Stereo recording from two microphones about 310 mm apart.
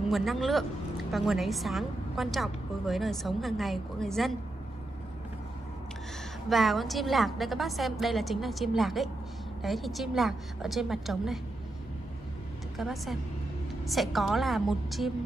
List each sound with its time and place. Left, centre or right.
0.1 s a woman's voice: centre
6.5 s a woman's voice: centre
12.7 s a woman's voice: centre